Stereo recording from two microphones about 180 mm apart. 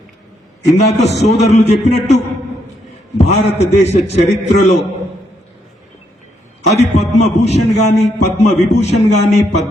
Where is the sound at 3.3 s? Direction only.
35° left (ahead or behind).